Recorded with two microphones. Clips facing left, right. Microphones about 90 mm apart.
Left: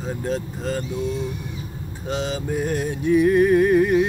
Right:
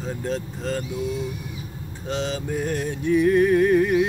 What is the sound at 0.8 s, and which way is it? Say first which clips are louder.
Speech: left 2 dB; 5° right (ahead or behind).